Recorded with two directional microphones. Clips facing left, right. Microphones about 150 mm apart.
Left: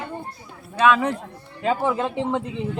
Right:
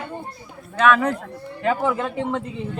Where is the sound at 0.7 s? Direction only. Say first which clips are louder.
Right 1 dB; 20° left (ahead or behind).